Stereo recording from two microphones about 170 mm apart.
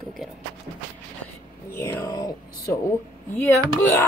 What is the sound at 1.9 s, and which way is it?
Speech, 20° left (ahead or behind).